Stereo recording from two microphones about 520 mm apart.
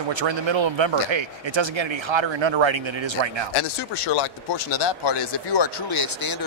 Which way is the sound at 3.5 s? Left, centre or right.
Left.